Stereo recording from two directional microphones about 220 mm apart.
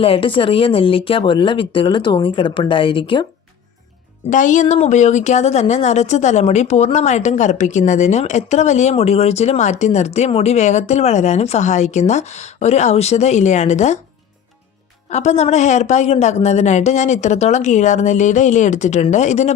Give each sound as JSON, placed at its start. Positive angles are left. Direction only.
{"t": 0.0, "sound": "speech", "side_deg": 25}
{"t": 4.3, "sound": "speech", "side_deg": 35}
{"t": 15.1, "sound": "speech", "side_deg": 30}